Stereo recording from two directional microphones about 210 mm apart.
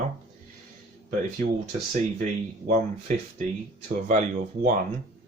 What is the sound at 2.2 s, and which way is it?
Speech, 40° right (ahead or behind).